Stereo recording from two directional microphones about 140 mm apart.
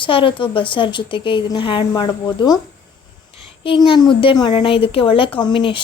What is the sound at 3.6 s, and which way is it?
A woman's voice, 35° left (ahead or behind).